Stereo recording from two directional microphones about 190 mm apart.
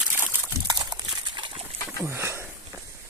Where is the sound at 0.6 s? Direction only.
20° right (ahead or behind).